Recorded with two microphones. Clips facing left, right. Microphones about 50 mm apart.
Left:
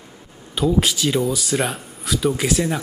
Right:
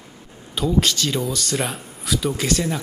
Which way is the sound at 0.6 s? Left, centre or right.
Centre.